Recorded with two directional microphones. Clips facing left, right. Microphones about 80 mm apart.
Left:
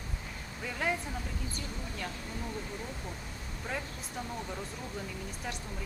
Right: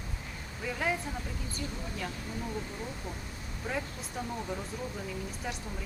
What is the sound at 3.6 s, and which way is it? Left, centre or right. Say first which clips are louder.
Speech: right 3 dB; centre.